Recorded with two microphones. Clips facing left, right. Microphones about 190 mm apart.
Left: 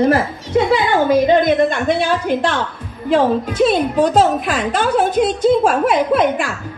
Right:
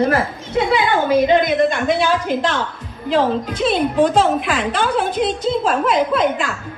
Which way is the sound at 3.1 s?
45° left (ahead or behind).